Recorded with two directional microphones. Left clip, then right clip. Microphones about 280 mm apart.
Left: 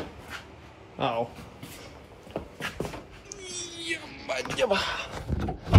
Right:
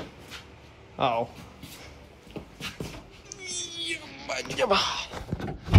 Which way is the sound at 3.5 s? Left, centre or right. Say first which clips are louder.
Right 1 dB; centre.